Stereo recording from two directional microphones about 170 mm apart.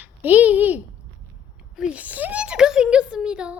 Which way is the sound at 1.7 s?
5° right (ahead or behind).